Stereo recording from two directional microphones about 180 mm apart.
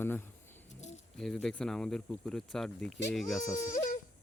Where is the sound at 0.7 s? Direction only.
40° left (ahead or behind).